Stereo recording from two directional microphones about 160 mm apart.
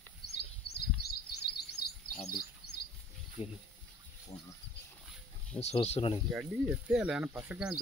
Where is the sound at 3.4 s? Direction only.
35° left (ahead or behind).